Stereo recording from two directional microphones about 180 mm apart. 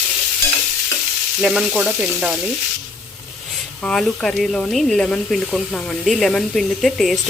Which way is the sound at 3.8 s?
5° left (ahead or behind).